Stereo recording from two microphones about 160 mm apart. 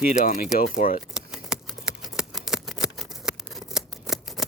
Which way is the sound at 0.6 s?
60° left (ahead or behind).